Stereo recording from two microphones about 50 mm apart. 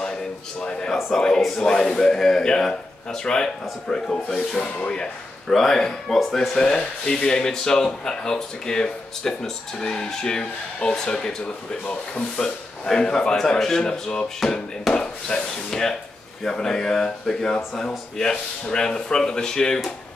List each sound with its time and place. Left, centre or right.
0.0 s a sound: centre
1.1 s speech: centre
5.5 s speech: centre; by 12.3 s left
12.4 s speech: centre